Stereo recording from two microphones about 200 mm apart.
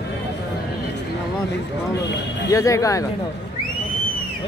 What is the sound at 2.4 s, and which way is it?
Speech, 15° left (ahead or behind).